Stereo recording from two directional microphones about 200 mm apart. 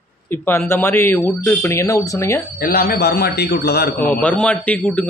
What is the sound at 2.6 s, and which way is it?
A man's voice, 50° left (ahead or behind).